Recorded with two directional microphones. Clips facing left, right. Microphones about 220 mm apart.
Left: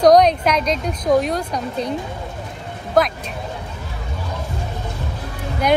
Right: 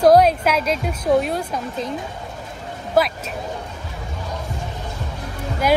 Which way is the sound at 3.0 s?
5° right (ahead or behind).